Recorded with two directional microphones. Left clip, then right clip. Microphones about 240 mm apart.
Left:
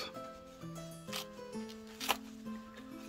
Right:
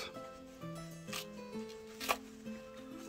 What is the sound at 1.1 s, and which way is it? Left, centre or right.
Music, centre.